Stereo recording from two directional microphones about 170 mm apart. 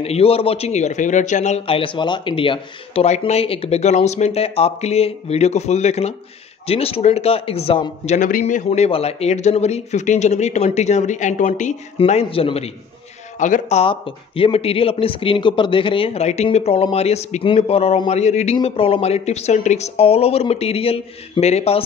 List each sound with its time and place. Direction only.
0.0 s speech: 35° left (ahead or behind)
12.0 s speech: 35° left (ahead or behind)